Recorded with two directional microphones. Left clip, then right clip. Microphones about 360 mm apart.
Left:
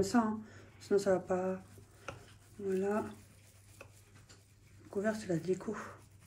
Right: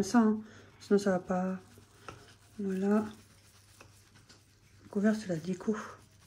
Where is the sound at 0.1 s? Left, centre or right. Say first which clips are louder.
Right 4 dB; right.